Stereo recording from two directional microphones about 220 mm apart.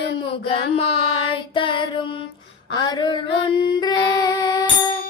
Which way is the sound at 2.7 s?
20° left (ahead or behind).